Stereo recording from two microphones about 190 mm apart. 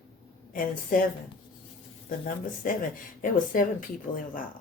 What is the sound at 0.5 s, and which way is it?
Speech, 45° left (ahead or behind).